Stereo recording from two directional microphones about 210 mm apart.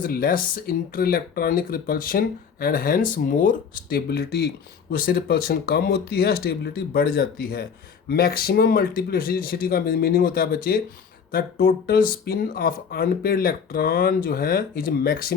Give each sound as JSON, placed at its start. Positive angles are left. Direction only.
{"t": 0.0, "sound": "speech", "side_deg": 45}